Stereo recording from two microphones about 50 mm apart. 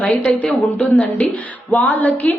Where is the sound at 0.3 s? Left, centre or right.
Left.